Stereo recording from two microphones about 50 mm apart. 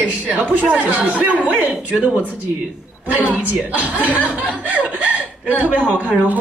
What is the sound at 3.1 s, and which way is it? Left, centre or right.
Speech, right.